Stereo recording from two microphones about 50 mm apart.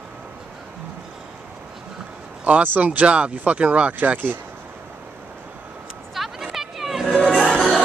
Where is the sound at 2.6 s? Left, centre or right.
Right.